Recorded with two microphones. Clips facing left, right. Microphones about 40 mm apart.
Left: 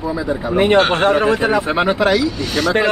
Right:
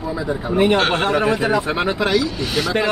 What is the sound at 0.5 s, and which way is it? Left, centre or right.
Speech, left.